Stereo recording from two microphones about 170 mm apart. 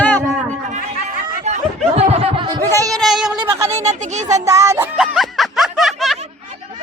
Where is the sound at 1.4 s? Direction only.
40° right (ahead or behind).